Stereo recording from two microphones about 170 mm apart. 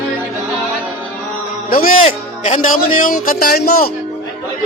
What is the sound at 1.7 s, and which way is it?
Music, 55° left (ahead or behind).